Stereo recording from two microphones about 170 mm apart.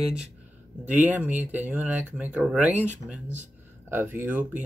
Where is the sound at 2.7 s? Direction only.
40° right (ahead or behind).